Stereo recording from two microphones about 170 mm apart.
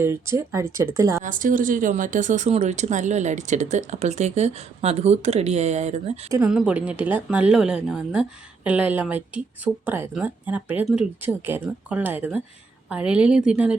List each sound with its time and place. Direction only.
0.0 s a woman's voice: 15° right (ahead or behind)
1.2 s speech: 50° right (ahead or behind)
6.5 s a woman's voice: 5° right (ahead or behind)